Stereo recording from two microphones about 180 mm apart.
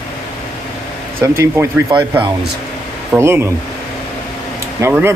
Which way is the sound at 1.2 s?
15° right (ahead or behind).